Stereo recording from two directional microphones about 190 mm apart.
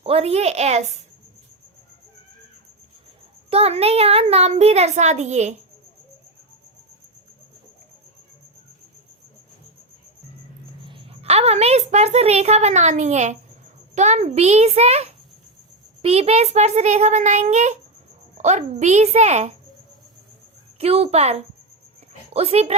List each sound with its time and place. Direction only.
0.0 s a child's voice: 30° right (ahead or behind)
3.5 s a child's voice: 30° right (ahead or behind)
10.8 s a woman's voice: 30° right (ahead or behind)
20.7 s a child's voice: 30° right (ahead or behind)